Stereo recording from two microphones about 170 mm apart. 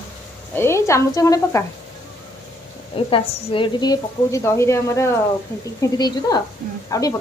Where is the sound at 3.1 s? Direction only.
30° left (ahead or behind).